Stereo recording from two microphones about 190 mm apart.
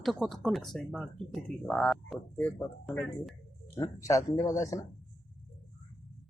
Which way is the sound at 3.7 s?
15° left (ahead or behind).